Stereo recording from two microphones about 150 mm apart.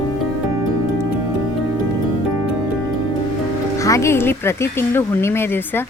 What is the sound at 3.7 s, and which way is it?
Speech, 20° left (ahead or behind).